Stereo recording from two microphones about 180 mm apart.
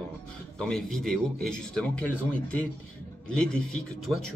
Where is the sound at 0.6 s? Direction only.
5° left (ahead or behind).